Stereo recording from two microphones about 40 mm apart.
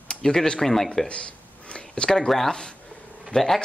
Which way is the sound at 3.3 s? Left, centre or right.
Centre.